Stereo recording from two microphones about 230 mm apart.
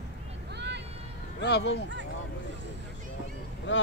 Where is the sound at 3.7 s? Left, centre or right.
Left.